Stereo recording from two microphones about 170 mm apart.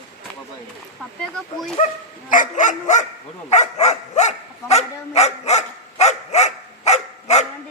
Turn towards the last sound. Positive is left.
turn(degrees=40)  # may be behind; listen again after turning